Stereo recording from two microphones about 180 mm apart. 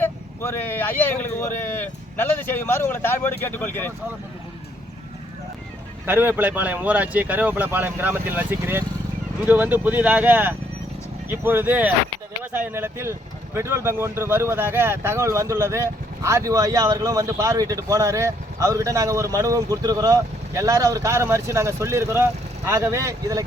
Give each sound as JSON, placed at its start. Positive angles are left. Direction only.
{"t": 0.0, "sound": "speech", "side_deg": 10}
{"t": 6.1, "sound": "speech", "side_deg": -10}